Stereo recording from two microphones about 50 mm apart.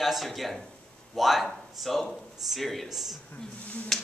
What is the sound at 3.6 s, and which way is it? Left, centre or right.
Speech, left.